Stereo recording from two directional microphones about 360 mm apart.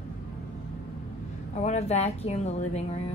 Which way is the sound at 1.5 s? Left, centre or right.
Centre.